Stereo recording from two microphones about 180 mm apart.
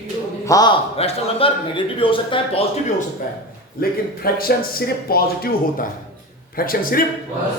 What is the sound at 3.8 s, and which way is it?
Speech, 55° left (ahead or behind).